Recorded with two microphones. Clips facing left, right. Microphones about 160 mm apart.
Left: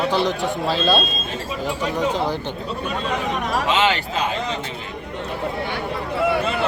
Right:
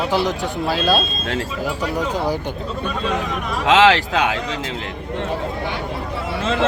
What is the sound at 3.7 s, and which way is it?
Speech, 90° right.